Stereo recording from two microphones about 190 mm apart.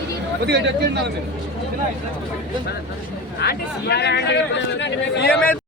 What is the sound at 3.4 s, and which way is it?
A man's voice, 60° left (ahead or behind).